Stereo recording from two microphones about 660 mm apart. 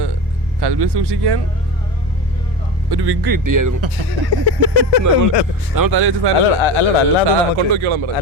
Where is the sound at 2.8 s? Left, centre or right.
Right.